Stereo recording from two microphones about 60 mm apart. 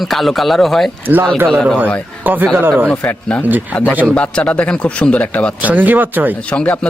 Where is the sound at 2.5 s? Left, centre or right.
Right.